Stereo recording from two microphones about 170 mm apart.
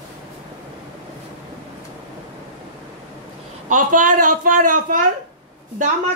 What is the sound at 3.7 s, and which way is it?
A woman's voice, 50° right (ahead or behind).